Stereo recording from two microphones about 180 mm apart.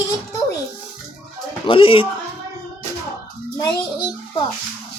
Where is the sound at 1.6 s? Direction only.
30° left (ahead or behind).